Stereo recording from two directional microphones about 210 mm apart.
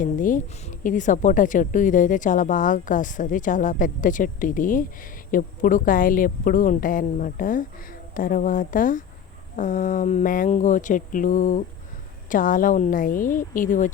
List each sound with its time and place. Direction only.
0.0 s a woman's voice: 40° left (ahead or behind)